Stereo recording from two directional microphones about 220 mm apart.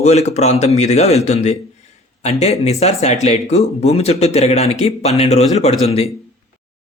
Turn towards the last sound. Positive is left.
turn(degrees=30)  # may be behind; listen again after turning